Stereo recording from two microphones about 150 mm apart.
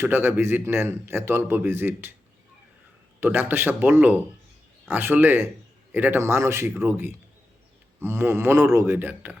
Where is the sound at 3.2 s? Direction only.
15° right (ahead or behind).